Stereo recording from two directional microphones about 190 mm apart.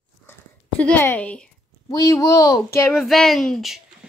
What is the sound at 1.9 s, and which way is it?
Speech, 20° left (ahead or behind).